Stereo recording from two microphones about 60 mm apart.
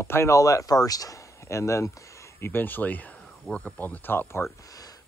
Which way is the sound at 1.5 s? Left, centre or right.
Left.